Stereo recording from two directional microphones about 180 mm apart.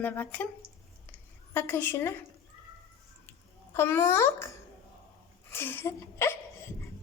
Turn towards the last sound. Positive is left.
turn(degrees=15)  # may be behind; listen again after turning